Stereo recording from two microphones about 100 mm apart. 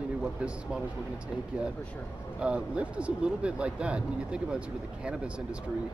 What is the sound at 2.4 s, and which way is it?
Speech, 10° right (ahead or behind).